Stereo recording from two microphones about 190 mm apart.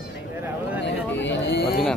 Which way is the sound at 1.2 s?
65° left (ahead or behind).